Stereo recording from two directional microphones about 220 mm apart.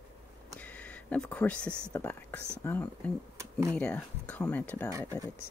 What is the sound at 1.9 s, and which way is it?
Speech, 10° left (ahead or behind).